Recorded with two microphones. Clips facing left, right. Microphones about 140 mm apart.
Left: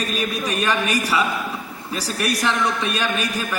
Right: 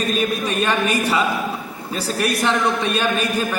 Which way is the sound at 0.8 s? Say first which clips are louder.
Right 2 dB; 25° right (ahead or behind).